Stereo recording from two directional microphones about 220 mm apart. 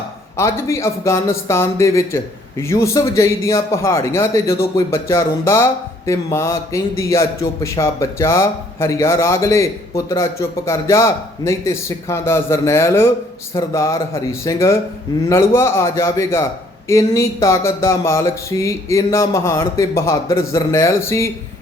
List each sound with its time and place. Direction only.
0.3 s speech: 15° left (ahead or behind)